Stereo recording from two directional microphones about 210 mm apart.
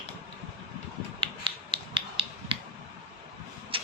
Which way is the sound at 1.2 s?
25° right (ahead or behind).